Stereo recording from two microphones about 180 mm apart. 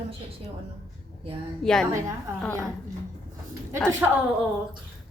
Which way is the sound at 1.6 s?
5° left (ahead or behind).